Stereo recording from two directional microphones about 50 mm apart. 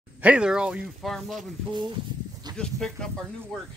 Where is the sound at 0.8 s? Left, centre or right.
Centre.